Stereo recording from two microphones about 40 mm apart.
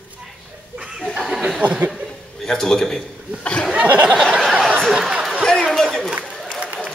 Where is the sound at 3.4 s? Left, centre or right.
Left.